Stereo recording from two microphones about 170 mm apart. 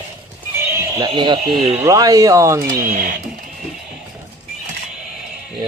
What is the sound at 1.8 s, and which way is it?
Speech, 20° right (ahead or behind).